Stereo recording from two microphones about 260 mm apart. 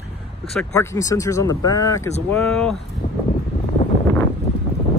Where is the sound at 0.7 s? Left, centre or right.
Centre.